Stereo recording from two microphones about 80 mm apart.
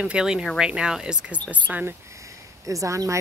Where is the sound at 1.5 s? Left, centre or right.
Right.